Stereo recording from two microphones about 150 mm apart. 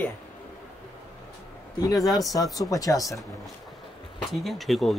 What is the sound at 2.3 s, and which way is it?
Speech, 25° left (ahead or behind).